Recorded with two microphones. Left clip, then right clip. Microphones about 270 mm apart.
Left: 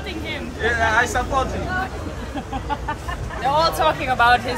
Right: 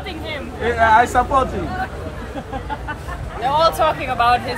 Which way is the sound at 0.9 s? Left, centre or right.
Right.